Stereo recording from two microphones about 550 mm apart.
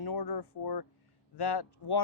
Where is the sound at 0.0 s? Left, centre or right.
Left.